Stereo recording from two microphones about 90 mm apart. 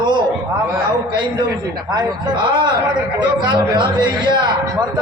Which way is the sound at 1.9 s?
60° right (ahead or behind).